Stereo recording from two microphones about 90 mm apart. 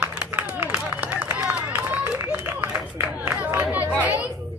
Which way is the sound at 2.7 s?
20° right (ahead or behind).